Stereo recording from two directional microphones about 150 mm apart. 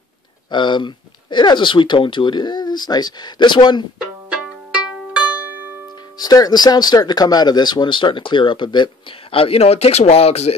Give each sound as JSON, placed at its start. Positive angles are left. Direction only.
{"t": 0.5, "sound": "speech", "side_deg": 30}
{"t": 4.3, "sound": "music", "side_deg": -5}
{"t": 6.1, "sound": "speech", "side_deg": 25}